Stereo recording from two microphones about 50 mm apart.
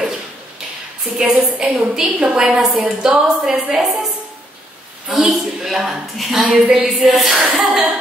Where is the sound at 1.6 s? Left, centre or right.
Centre.